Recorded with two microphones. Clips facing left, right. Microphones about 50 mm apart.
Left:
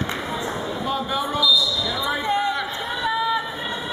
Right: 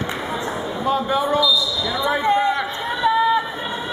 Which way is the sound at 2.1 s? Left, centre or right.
Right.